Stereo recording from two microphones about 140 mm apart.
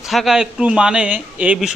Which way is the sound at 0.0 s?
Centre (ahead or behind).